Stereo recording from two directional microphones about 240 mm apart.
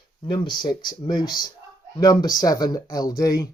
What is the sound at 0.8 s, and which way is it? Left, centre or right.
Speech, centre.